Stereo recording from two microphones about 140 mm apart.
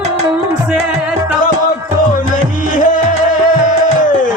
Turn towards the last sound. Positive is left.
turn(degrees=80)